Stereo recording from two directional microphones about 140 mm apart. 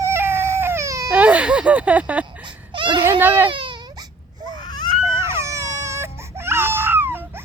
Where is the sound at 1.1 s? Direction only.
10° right (ahead or behind).